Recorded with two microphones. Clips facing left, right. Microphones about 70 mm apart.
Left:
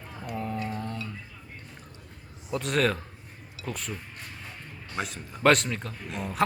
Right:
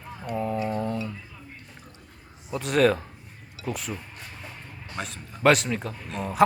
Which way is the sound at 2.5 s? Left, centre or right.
Centre.